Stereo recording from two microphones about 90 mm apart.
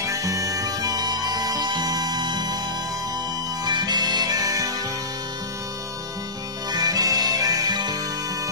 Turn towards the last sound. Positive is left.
turn(degrees=-50)  # may be behind; listen again after turning